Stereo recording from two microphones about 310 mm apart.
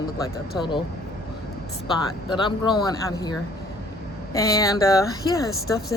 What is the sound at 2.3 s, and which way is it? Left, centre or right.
Speech, centre.